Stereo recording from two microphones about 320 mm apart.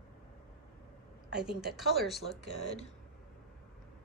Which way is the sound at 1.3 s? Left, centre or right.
Right.